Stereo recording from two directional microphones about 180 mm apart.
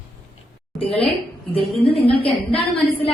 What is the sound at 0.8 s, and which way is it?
Speech, 30° left (ahead or behind).